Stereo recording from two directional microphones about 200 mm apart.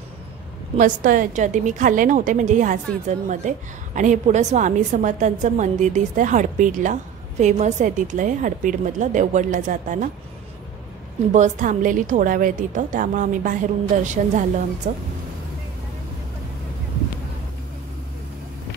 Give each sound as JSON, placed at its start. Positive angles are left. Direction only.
{"t": 0.7, "sound": "a woman's voice", "side_deg": -40}
{"t": 11.3, "sound": "a woman's voice", "side_deg": -40}